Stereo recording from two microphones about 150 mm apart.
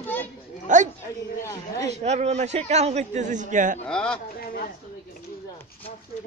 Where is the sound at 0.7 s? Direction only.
55° right (ahead or behind).